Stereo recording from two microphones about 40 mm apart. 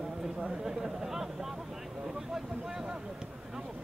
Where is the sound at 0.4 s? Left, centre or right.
Centre.